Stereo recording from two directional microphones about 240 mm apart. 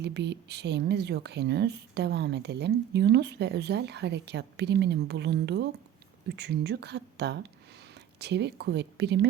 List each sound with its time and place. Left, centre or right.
0.0 s a woman's voice: right